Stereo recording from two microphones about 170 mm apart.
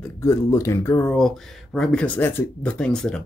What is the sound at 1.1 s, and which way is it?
Speech, centre (ahead or behind).